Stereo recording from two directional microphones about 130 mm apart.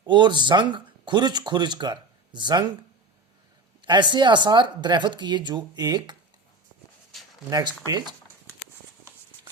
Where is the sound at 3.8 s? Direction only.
35° right (ahead or behind).